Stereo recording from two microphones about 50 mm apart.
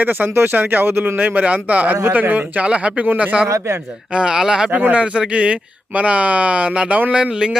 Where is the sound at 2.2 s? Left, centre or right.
Right.